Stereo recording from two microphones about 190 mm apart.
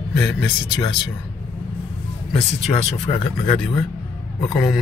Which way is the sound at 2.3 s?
35° left (ahead or behind).